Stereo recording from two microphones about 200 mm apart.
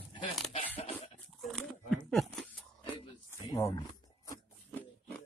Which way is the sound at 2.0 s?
Centre (ahead or behind).